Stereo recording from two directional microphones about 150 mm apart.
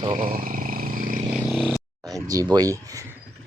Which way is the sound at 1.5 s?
Centre (ahead or behind).